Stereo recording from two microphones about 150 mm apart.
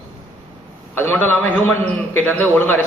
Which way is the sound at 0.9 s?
10° left (ahead or behind).